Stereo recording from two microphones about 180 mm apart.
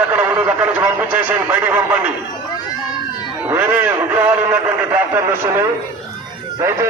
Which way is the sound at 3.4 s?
10° right (ahead or behind).